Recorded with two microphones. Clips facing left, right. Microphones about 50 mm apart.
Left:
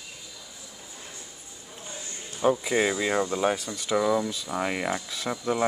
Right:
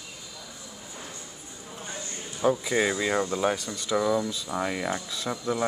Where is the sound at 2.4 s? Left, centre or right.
Centre.